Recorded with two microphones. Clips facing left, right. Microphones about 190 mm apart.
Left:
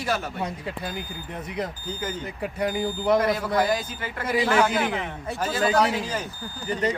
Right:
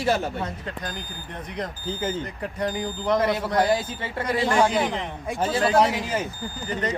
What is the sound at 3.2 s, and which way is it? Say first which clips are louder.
Speech: even; 25° right (ahead or behind).